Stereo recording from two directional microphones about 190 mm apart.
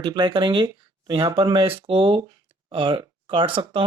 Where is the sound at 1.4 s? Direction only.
25° right (ahead or behind).